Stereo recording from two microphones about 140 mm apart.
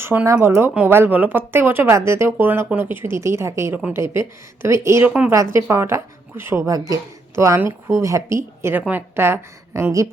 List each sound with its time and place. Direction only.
0.0 s speech: 15° right (ahead or behind)